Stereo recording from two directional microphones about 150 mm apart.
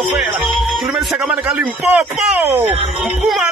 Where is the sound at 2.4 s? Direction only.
15° right (ahead or behind).